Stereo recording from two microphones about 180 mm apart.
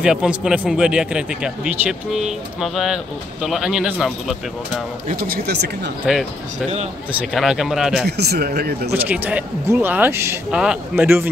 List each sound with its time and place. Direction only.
0.0 s a man's voice: 5° right (ahead or behind)
6.0 s a man's voice: 5° right (ahead or behind)
8.2 s speech: 60° right (ahead or behind)
8.9 s speech: 10° right (ahead or behind)